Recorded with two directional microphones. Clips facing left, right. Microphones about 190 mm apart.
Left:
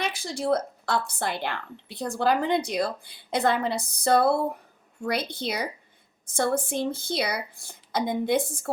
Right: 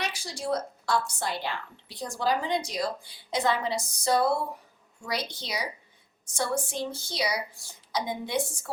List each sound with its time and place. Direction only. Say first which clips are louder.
0.0 s a woman's voice: left 5 dB; 55° left (ahead or behind)